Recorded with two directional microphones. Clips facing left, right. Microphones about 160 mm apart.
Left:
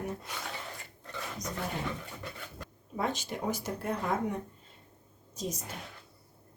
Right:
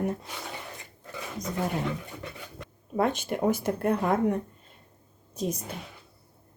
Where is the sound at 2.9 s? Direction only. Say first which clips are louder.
Right 7 dB; 55° right (ahead or behind).